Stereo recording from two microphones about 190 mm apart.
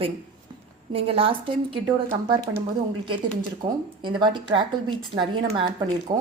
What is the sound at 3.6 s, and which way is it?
Speech, 25° right (ahead or behind).